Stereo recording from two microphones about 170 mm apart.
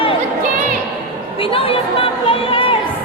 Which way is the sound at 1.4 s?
35° left (ahead or behind).